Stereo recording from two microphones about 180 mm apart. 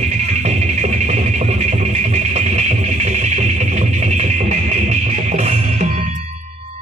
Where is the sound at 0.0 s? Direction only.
40° right (ahead or behind).